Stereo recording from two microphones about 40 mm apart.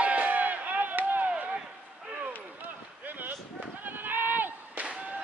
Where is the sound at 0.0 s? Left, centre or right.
Right.